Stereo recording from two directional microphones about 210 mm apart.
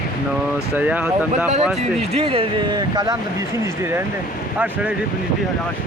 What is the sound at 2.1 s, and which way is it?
Speech, 25° right (ahead or behind).